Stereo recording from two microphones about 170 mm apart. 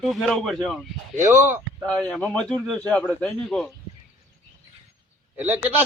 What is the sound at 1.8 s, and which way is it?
A man's voice, 5° left (ahead or behind).